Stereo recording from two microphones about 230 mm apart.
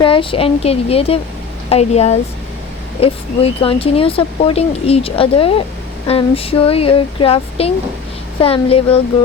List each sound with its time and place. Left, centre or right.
0.0 s speech: left